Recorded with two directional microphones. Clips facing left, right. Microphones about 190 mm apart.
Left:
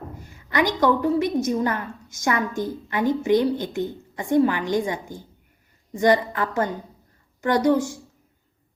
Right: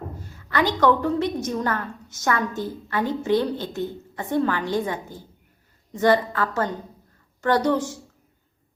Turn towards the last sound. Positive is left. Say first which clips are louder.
# left 1 dB
turn(degrees=10)  # may be behind; listen again after turning